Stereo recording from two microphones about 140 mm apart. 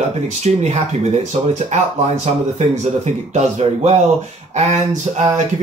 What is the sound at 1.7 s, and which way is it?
Speech, 60° right (ahead or behind).